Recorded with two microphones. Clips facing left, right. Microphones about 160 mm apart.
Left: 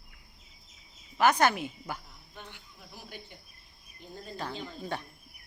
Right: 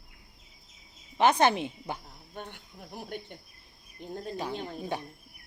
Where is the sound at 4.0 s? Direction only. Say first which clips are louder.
Right 7 dB; 55° right (ahead or behind).